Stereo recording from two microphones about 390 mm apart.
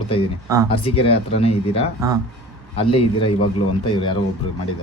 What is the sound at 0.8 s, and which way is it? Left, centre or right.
Speech, centre.